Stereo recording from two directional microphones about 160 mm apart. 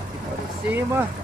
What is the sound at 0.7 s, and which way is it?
Speech, 15° right (ahead or behind).